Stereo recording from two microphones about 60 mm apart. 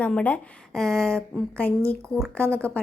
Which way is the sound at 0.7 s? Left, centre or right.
Centre.